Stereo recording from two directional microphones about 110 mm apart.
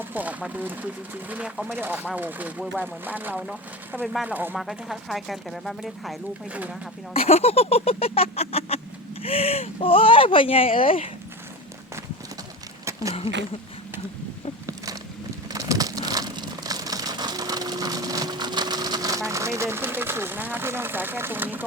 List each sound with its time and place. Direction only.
0.0 s speech: 15° right (ahead or behind)
4.5 s speech: centre (ahead or behind)
6.5 s speech: 10° right (ahead or behind)
7.1 s a sound: 70° left (ahead or behind)
9.2 s speech: 65° left (ahead or behind)
12.8 s a sound: 30° right (ahead or behind)
15.4 s crumpling: 30° right (ahead or behind); by 21.6 s 15° right (ahead or behind)